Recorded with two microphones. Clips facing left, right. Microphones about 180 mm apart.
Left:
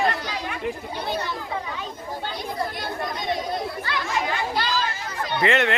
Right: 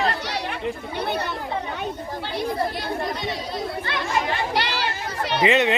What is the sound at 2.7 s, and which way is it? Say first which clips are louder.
Speech: right 2 dB; 50° left (ahead or behind).